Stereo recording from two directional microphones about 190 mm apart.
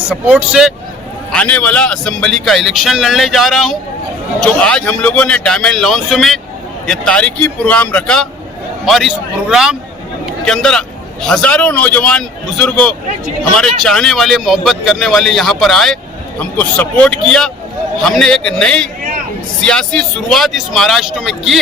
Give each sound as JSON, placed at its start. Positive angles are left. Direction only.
{"t": 0.1, "sound": "a man's voice", "side_deg": -5}
{"t": 1.3, "sound": "a man's voice", "side_deg": 5}